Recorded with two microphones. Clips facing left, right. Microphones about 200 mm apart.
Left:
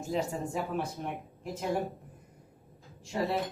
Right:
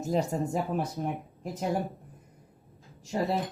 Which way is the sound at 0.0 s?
40° right (ahead or behind).